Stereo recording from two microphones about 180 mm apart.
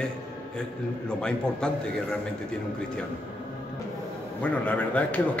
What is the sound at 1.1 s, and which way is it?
Speech, 5° left (ahead or behind).